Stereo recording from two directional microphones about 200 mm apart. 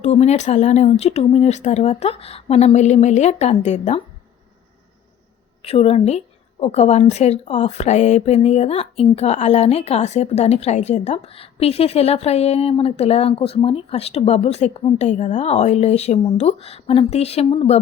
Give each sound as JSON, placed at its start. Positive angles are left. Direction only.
{"t": 0.0, "sound": "a woman's voice", "side_deg": 35}
{"t": 5.6, "sound": "a woman's voice", "side_deg": 30}